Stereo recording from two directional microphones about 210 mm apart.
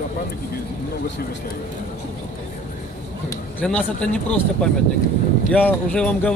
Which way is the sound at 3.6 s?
5° left (ahead or behind).